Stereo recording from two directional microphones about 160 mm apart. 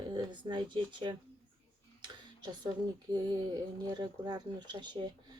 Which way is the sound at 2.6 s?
25° right (ahead or behind).